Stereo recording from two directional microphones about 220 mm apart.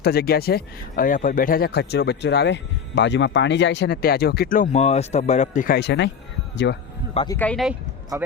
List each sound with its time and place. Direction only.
0.0 s speech: 45° left (ahead or behind)
7.1 s speech: 25° left (ahead or behind)
7.3 s speech: 5° left (ahead or behind)